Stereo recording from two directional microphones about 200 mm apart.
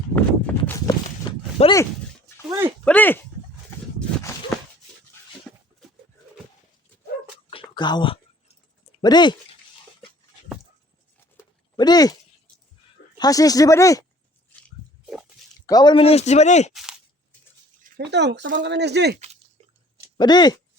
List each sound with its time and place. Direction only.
0.2 s horse: 10° left (ahead or behind)
1.6 s speech: 30° left (ahead or behind)
2.5 s speech: 20° right (ahead or behind)
2.8 s speech: 10° left (ahead or behind)
5.5 s a sound: 5° left (ahead or behind)
7.5 s a sound: 25° left (ahead or behind)
9.0 s speech: 20° left (ahead or behind)
11.8 s speech: 20° left (ahead or behind)
13.1 s speech: 20° left (ahead or behind)
15.6 s speech: 20° left (ahead or behind)
17.8 s speech: 50° right (ahead or behind)
20.1 s speech: 20° left (ahead or behind)